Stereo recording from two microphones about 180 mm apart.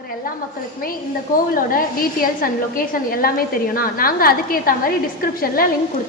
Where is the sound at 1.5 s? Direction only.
50° left (ahead or behind).